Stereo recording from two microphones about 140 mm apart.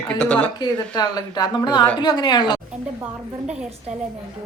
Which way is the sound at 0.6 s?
30° left (ahead or behind).